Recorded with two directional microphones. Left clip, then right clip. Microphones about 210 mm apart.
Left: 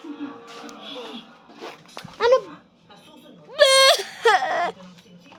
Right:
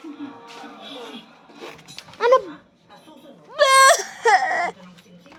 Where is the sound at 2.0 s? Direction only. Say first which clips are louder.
Even; 20° left (ahead or behind).